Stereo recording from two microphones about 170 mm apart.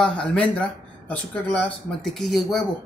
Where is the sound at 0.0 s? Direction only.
5° left (ahead or behind).